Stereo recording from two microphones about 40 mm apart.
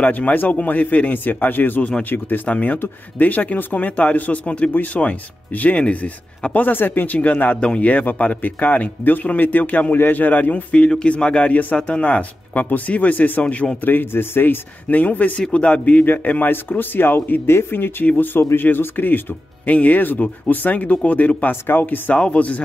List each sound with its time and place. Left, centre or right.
0.1 s speech: left
0.5 s speech: left
2.4 s speech: left
6.5 s speech: left
7.6 s speech: left
12.6 s speech: left
13.8 s speech: left
14.9 s speech: left
16.3 s speech: left
17.5 s speech: left
18.1 s speech: left
18.4 s speech: left
18.9 s speech: left
19.7 s speech: left